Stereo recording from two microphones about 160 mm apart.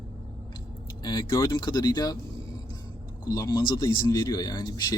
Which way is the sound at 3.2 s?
25° left (ahead or behind).